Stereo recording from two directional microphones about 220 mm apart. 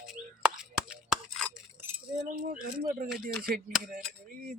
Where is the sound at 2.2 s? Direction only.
40° right (ahead or behind).